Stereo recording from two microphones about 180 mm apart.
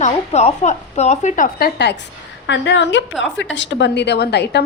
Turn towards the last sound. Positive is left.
turn(degrees=65)  # may be behind; listen again after turning